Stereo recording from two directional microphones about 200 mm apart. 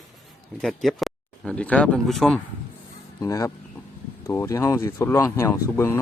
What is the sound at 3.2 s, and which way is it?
Speech, 15° left (ahead or behind).